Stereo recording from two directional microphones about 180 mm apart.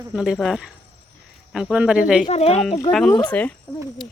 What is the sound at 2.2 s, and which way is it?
Speech, 35° left (ahead or behind).